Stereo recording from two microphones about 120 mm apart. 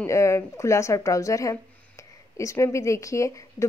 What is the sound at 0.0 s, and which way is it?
A woman's voice, 25° left (ahead or behind).